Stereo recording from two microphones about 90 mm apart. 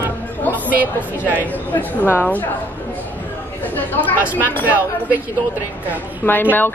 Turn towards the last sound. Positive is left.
turn(degrees=20)  # may be behind; listen again after turning